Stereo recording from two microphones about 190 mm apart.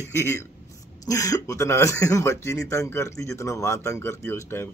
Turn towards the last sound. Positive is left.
turn(degrees=15)  # may be behind; listen again after turning